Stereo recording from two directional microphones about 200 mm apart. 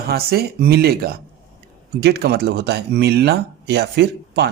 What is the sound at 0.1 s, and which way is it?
Speech, 50° right (ahead or behind).